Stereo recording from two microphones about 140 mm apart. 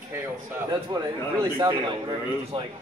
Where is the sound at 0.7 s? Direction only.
30° right (ahead or behind).